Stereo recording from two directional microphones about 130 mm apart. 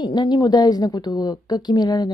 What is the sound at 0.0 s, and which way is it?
A woman's voice, 35° left (ahead or behind).